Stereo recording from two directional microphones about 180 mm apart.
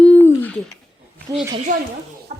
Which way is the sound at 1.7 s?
50° right (ahead or behind).